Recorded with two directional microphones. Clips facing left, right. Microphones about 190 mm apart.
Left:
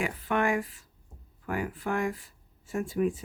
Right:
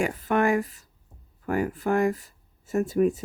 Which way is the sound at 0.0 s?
40° right (ahead or behind).